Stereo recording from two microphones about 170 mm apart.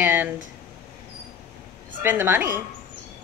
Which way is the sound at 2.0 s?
10° right (ahead or behind).